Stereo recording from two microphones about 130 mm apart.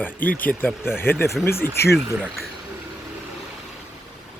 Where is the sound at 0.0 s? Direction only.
15° left (ahead or behind).